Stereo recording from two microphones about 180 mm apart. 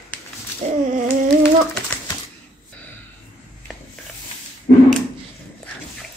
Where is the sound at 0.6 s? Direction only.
35° right (ahead or behind).